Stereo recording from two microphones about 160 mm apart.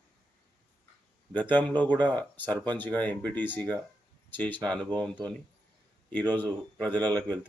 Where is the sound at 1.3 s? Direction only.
10° left (ahead or behind).